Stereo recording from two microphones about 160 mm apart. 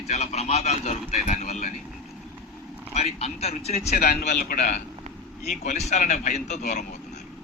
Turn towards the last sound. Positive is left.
turn(degrees=50)  # may be behind; listen again after turning